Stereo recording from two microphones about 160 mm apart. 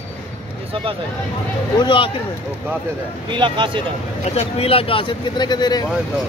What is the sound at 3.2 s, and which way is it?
Speech, 30° right (ahead or behind).